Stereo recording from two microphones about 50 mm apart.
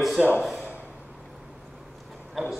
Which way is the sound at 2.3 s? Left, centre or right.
Centre.